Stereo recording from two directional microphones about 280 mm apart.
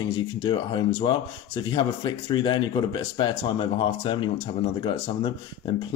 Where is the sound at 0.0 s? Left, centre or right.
Centre.